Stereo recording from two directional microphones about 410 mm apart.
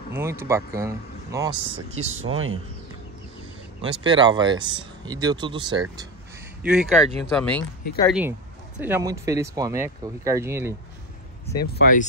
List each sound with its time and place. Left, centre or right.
0.1 s speech: centre
2.0 s speech: right
3.8 s speech: centre
11.6 s speech: left